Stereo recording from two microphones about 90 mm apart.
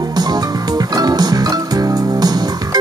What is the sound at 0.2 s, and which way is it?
Music, 45° right (ahead or behind).